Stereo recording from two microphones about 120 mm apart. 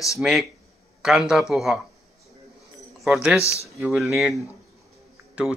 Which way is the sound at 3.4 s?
25° left (ahead or behind).